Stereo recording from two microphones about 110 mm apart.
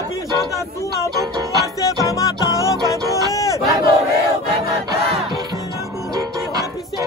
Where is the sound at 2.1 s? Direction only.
30° left (ahead or behind).